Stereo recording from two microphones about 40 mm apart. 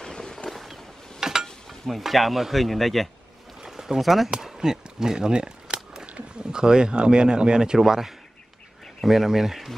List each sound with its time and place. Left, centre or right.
0.0 s boat: centre
0.5 s boat: centre
1.4 s speech: centre
3.6 s a sound: centre
4.4 s speech: centre